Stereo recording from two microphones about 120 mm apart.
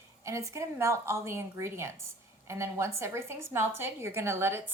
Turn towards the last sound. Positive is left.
turn(degrees=-20)  # may be behind; listen again after turning